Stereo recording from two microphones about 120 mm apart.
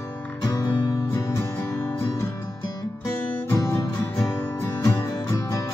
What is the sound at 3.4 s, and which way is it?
Music, 25° left (ahead or behind).